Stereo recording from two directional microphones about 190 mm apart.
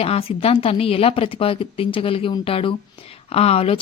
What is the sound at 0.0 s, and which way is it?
Speech, 30° left (ahead or behind).